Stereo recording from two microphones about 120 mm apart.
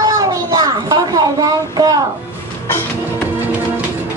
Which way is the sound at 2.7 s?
20° left (ahead or behind).